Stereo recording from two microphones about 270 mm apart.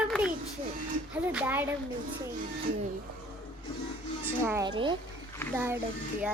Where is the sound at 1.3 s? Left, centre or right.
Centre.